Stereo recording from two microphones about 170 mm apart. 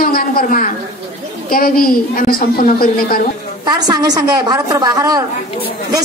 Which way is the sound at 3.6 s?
25° right (ahead or behind).